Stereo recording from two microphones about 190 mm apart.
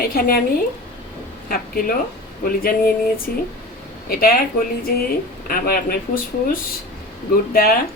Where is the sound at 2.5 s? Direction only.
50° left (ahead or behind).